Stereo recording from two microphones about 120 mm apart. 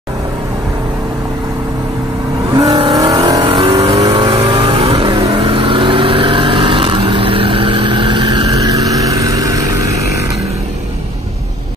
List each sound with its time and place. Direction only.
2.7 s vehicle: 45° right (ahead or behind)
3.0 s vehicle: 35° right (ahead or behind)
3.4 s vehicle: 45° right (ahead or behind)
3.9 s vehicle: 30° right (ahead or behind)
4.4 s vehicle: 40° right (ahead or behind)